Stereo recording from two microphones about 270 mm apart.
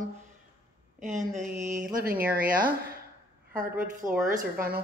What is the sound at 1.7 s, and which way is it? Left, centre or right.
A woman's voice, right.